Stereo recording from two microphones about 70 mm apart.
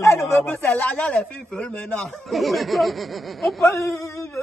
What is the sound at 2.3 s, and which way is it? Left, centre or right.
Speech, centre.